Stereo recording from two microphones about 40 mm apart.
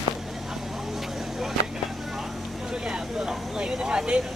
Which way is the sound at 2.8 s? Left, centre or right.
Centre.